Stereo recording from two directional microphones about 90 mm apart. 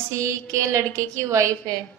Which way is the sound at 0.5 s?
35° right (ahead or behind).